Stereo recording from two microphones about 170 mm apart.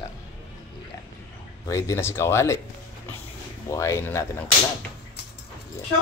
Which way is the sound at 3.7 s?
15° left (ahead or behind).